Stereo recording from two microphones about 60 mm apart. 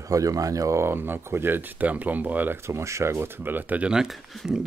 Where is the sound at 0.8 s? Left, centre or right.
Right.